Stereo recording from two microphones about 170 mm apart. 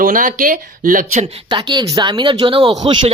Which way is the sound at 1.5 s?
25° right (ahead or behind).